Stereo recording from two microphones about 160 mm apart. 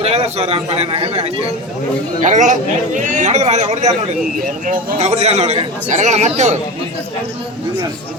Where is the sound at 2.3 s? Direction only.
50° right (ahead or behind).